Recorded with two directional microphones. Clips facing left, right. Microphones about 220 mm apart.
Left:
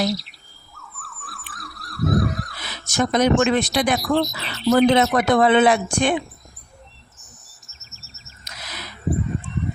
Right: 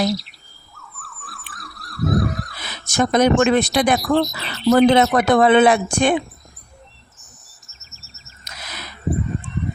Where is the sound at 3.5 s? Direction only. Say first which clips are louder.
Right 3 dB; 50° right (ahead or behind).